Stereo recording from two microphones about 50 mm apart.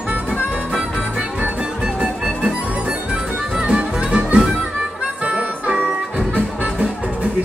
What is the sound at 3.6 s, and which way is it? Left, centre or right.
Music, right.